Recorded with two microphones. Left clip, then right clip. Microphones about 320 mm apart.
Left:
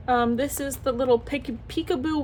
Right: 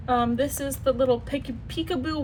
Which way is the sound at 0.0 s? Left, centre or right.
Centre.